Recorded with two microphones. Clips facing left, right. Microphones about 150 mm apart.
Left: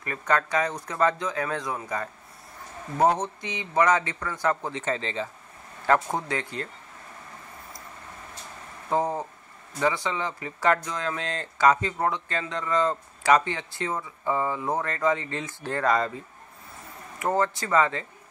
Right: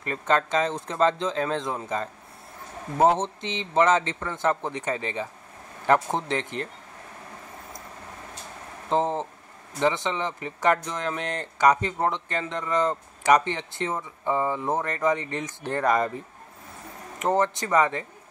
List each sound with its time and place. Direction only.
0.0 s speech: 25° right (ahead or behind)
8.8 s speech: 20° right (ahead or behind)
17.2 s speech: 20° right (ahead or behind)